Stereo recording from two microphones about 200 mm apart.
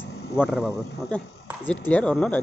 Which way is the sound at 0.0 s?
55° left (ahead or behind).